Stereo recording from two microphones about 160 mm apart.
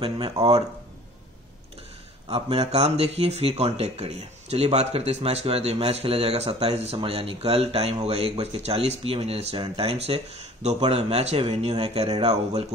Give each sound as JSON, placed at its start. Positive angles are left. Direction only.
{"t": 0.0, "sound": "speech", "side_deg": -35}
{"t": 2.2, "sound": "speech", "side_deg": -40}